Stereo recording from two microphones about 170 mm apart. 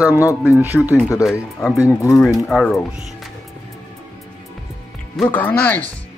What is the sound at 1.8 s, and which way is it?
Speech, 20° left (ahead or behind).